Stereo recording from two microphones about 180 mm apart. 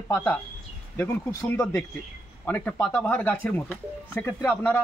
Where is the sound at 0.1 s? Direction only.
10° left (ahead or behind).